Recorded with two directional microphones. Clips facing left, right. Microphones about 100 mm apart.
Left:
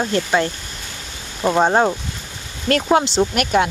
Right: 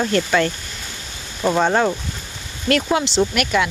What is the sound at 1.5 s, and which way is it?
Speech, 30° left (ahead or behind).